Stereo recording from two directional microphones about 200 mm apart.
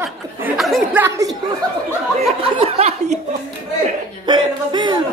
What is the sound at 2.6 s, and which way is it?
Speech, 30° right (ahead or behind).